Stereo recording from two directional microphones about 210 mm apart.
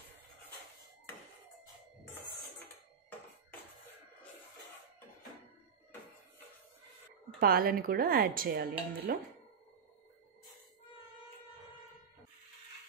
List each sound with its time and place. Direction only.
7.3 s speech: 45° right (ahead or behind)